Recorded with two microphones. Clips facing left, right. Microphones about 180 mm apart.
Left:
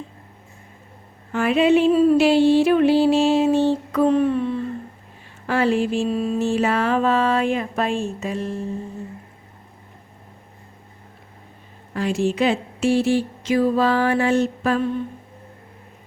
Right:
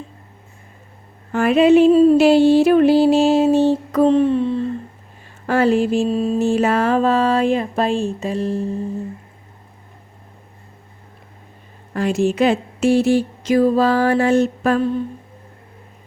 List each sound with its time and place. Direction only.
1.3 s a woman's voice: 45° right (ahead or behind)
1.9 s a sound: 30° right (ahead or behind)
2.1 s speech: 40° right (ahead or behind)
4.1 s a sound: 30° right (ahead or behind)
5.5 s a woman's voice: 45° right (ahead or behind)
6.1 s speech: 30° right (ahead or behind)
6.4 s speech: 45° right (ahead or behind)
11.9 s a woman's voice: 45° right (ahead or behind)